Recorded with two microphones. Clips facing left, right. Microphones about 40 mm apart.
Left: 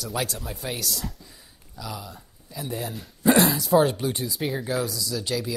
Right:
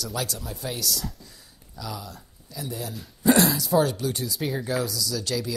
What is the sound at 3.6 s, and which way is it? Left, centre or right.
Speech, centre.